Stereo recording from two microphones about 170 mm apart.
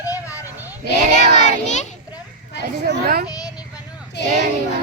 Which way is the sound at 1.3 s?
45° left (ahead or behind).